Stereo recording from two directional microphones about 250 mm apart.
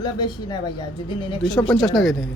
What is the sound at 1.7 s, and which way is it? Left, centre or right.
Speech, centre.